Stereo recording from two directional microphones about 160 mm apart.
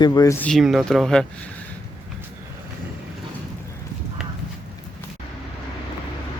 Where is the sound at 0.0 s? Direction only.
20° left (ahead or behind).